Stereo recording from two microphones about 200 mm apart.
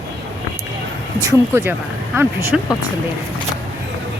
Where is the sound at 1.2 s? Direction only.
15° right (ahead or behind).